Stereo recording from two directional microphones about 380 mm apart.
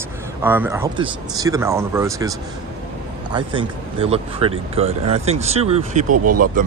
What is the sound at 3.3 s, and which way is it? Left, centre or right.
Speech, centre.